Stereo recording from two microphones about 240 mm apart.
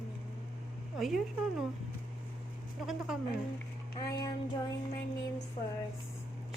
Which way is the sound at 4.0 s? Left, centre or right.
Centre.